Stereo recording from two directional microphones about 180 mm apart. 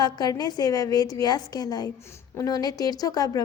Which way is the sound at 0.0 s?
20° left (ahead or behind).